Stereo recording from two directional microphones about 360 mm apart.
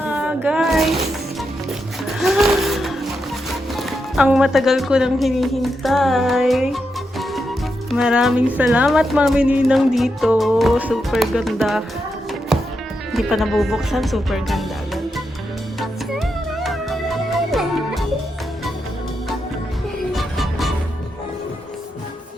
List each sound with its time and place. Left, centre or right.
0.0 s a sound: centre
2.0 s a sound: centre
3.8 s speech: centre
7.9 s speech: centre
13.1 s speech: centre
15.8 s music: centre
20.1 s music: centre